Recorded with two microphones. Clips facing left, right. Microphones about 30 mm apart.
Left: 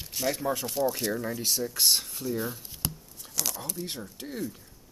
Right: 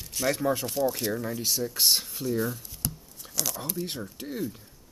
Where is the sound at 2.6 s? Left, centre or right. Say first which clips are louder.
Even; centre.